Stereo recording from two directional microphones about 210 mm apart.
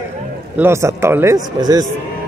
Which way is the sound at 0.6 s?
15° right (ahead or behind).